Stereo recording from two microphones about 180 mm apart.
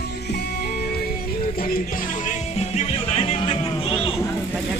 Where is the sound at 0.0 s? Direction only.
65° left (ahead or behind); by 4.2 s 30° left (ahead or behind).